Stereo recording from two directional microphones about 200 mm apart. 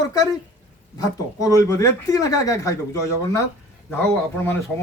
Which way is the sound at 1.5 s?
15° left (ahead or behind).